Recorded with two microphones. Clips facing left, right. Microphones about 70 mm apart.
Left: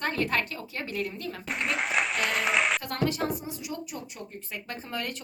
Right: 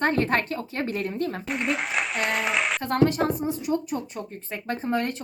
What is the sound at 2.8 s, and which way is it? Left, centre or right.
A woman's voice, right.